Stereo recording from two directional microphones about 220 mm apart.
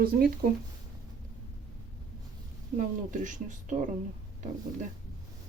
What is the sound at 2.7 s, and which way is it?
Speech, 35° right (ahead or behind).